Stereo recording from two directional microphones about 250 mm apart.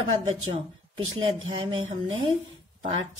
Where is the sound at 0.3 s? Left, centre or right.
Right.